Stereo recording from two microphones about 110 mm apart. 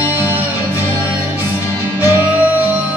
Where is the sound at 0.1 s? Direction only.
20° right (ahead or behind).